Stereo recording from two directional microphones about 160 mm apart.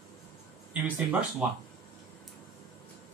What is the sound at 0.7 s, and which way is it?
Speech, 5° right (ahead or behind).